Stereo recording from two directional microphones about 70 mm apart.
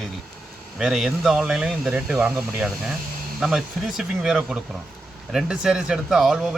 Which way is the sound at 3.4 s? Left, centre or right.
Centre.